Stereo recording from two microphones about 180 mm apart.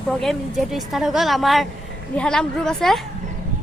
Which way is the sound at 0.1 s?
Centre (ahead or behind).